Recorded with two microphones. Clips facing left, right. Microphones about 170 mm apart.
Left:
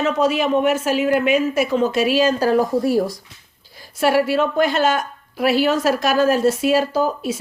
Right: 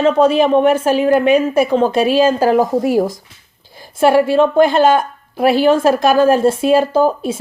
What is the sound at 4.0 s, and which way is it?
Speech, 25° right (ahead or behind).